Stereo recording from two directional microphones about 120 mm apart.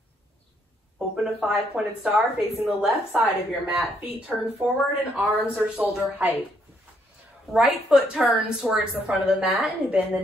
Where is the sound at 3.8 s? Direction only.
Centre (ahead or behind).